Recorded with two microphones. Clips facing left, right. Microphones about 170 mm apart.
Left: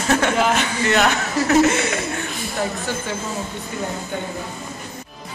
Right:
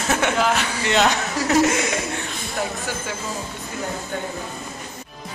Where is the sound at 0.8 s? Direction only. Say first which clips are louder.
Left 1 dB; 20° right (ahead or behind).